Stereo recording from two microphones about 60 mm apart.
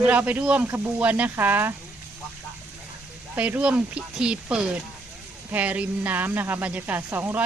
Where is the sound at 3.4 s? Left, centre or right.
Right.